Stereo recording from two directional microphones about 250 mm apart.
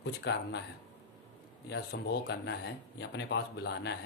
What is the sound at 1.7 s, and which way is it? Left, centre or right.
Speech, left.